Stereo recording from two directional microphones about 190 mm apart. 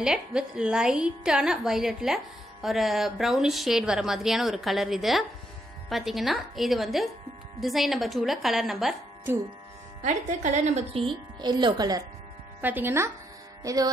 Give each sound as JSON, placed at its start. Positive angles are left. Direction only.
{"t": 0.0, "sound": "a woman's voice", "side_deg": -5}
{"t": 10.0, "sound": "a woman's voice", "side_deg": -40}
{"t": 11.4, "sound": "speech", "side_deg": -20}
{"t": 12.6, "sound": "speech", "side_deg": -10}